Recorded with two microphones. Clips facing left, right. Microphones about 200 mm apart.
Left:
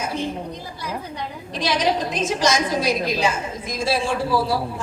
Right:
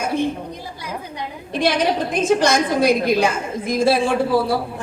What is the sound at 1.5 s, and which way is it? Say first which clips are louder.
A woman's voice: right 3 dB; 55° right (ahead or behind).